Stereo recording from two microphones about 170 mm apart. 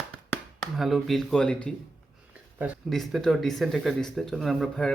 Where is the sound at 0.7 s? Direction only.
Centre (ahead or behind).